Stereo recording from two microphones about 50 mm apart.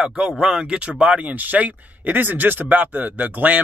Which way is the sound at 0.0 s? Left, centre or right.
Centre.